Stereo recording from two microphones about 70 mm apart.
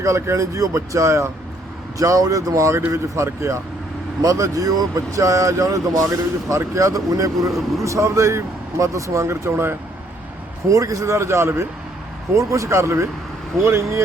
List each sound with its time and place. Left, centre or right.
0.0 s speech: right
4.2 s speech: right
10.7 s speech: right